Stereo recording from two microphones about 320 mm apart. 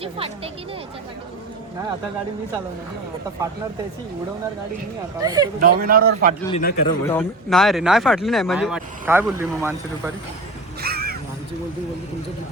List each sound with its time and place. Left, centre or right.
0.0 s speech: centre
5.2 s speech: centre
5.5 s a man's voice: right
6.5 s a man's voice: left
6.8 s speech: centre
10.8 s a sound: right